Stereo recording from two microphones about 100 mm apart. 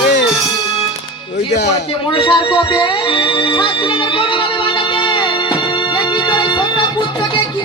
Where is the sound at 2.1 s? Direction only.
55° left (ahead or behind).